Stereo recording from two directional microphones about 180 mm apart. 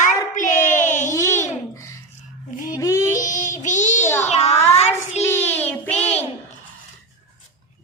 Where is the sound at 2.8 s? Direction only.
15° left (ahead or behind).